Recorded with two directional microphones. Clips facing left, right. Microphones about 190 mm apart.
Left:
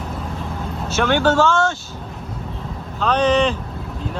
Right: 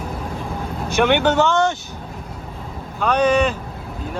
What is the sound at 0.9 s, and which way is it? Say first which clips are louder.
Speech: right 1 dB; 15° right (ahead or behind).